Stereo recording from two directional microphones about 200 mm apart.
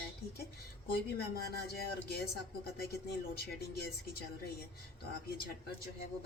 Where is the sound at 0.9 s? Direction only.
50° left (ahead or behind).